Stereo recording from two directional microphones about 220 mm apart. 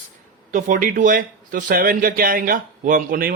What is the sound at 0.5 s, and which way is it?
A man's voice, 40° right (ahead or behind).